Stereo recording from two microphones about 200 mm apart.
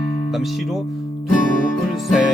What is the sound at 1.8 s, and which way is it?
Music, centre (ahead or behind).